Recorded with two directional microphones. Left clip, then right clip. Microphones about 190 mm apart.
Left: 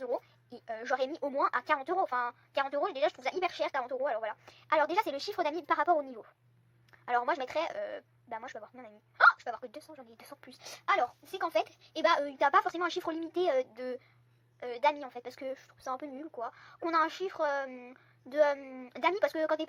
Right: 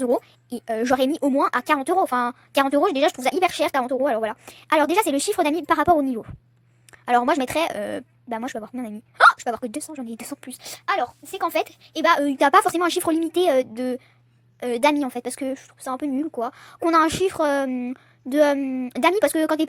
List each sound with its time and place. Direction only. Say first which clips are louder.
0.0 s a woman's voice: right 13 dB; 45° right (ahead or behind)
10.7 s speech: right 6 dB; 20° right (ahead or behind)
11.3 s a woman's voice: right 8 dB; 35° right (ahead or behind)